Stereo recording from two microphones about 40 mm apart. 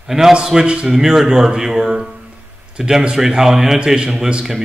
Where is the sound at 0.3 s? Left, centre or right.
Centre.